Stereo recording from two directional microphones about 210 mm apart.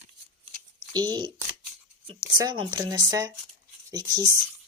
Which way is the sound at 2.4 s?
20° right (ahead or behind).